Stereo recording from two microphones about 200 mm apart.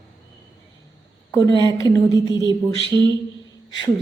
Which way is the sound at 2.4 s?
20° right (ahead or behind).